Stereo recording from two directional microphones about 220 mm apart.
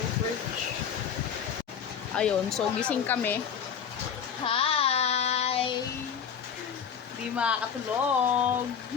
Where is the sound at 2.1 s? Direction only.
5° left (ahead or behind).